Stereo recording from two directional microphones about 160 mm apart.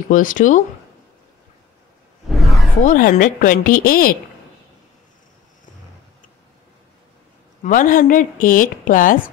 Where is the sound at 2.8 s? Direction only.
55° left (ahead or behind).